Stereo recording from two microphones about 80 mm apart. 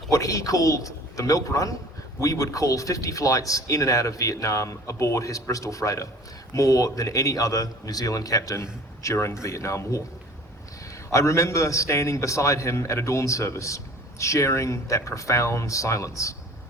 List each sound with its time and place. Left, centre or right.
0.1 s speech: left
11.1 s a man's voice: left